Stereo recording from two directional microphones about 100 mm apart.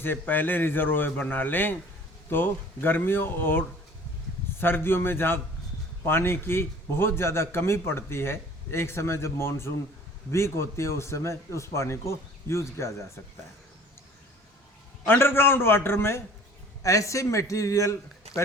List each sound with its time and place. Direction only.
0.0 s a man's voice: 20° left (ahead or behind)
4.6 s a man's voice: 20° left (ahead or behind)
15.0 s a man's voice: 20° left (ahead or behind)